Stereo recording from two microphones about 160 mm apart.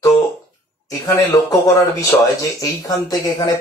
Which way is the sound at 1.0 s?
20° left (ahead or behind).